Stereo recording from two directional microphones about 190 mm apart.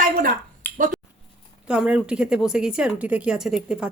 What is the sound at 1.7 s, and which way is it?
Speech, 5° right (ahead or behind).